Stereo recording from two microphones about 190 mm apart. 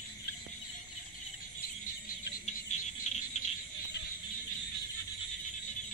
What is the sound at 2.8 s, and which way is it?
Cricket, 35° left (ahead or behind).